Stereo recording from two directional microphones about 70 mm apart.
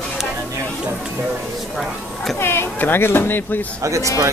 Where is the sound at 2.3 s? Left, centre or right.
Left.